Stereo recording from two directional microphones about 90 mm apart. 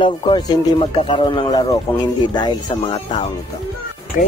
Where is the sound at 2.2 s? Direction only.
55° left (ahead or behind).